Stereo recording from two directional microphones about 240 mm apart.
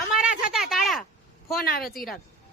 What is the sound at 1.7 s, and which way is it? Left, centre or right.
Speech, left.